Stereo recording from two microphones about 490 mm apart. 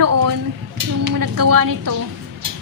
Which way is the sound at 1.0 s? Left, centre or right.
Right.